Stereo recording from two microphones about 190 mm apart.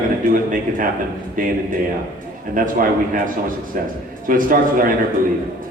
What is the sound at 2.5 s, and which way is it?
A man's voice, 45° right (ahead or behind).